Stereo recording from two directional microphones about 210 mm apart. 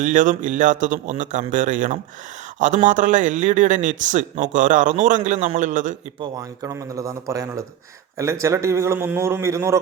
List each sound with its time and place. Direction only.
0.0 s speech: 35° right (ahead or behind)
6.1 s a man's voice: 15° right (ahead or behind)